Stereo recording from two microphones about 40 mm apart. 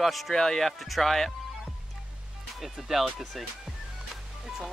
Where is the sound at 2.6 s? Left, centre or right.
Centre.